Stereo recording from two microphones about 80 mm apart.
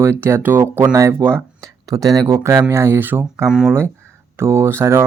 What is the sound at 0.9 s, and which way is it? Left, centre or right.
Speech, right.